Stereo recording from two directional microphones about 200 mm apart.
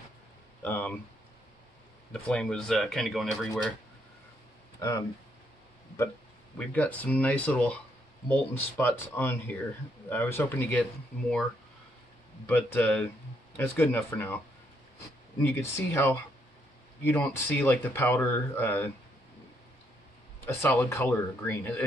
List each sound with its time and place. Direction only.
0.6 s a sound: 10° left (ahead or behind)
2.1 s speech: 5° left (ahead or behind)
4.7 s speech: 15° left (ahead or behind)
6.7 s speech: 10° left (ahead or behind)
12.4 s speech: 10° left (ahead or behind)
15.4 s speech: 10° left (ahead or behind)
20.4 s speech: 10° left (ahead or behind)